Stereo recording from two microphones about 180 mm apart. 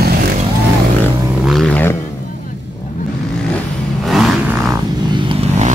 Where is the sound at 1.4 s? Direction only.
Centre (ahead or behind).